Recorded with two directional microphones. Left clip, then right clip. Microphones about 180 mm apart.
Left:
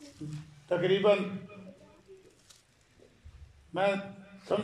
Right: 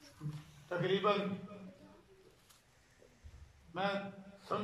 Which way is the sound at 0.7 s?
45° left (ahead or behind).